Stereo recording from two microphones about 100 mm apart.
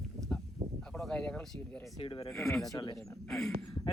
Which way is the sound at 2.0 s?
65° left (ahead or behind).